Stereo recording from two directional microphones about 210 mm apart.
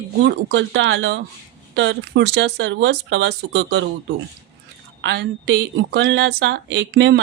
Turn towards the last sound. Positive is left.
turn(degrees=-55)  # may be behind; listen again after turning